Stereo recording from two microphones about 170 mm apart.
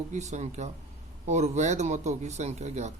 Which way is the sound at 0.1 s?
45° right (ahead or behind).